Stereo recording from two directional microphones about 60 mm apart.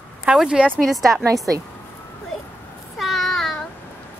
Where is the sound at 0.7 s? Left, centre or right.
Centre.